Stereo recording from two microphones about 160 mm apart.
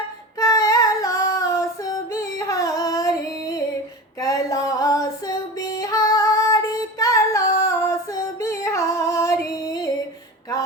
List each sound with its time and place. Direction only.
0.3 s female singing: 20° left (ahead or behind)
2.4 s singing: 20° left (ahead or behind)
4.2 s music: 20° left (ahead or behind)